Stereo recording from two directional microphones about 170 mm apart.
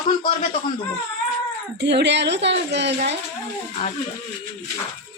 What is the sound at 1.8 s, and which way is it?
A woman's voice, 90° right.